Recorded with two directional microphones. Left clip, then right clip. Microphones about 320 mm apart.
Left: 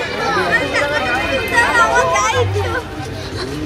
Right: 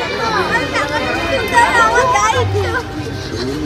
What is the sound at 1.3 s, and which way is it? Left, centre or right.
Children playing, right.